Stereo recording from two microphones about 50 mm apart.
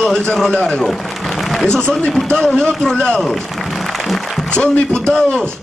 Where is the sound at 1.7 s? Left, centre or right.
Centre.